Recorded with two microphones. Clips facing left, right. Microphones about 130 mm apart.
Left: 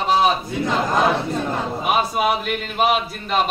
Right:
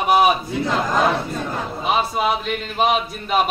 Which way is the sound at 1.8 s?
10° left (ahead or behind).